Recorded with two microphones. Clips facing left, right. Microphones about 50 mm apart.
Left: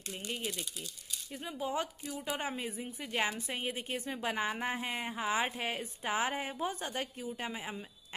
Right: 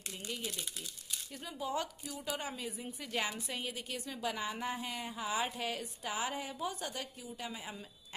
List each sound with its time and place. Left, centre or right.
0.1 s a woman's voice: left
3.0 s a woman's voice: left